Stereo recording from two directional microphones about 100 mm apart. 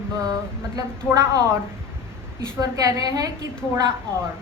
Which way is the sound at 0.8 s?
35° right (ahead or behind).